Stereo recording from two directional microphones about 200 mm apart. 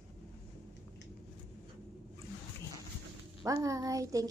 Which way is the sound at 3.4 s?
15° right (ahead or behind).